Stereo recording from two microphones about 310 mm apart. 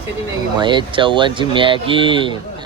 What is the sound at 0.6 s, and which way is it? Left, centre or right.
Speech, centre.